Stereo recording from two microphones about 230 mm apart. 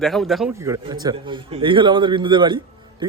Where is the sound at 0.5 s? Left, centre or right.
Centre.